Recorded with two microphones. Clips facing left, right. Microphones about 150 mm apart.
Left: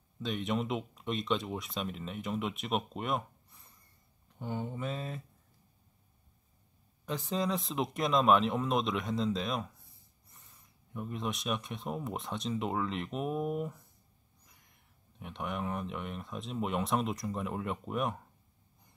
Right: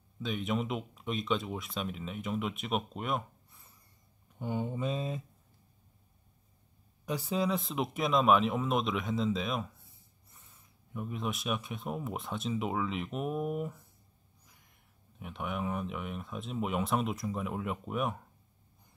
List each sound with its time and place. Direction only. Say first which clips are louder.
0.2 s speech: even; centre (ahead or behind)
4.4 s speech: right 3 dB; 15° right (ahead or behind)
7.1 s speech: right 2 dB; 10° right (ahead or behind)
15.1 s speech: right 1 dB; centre (ahead or behind)